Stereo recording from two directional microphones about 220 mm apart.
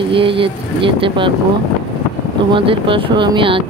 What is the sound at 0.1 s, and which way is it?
Speech, 25° right (ahead or behind).